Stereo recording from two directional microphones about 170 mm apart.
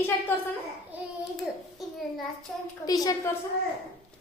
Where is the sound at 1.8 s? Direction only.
Centre (ahead or behind).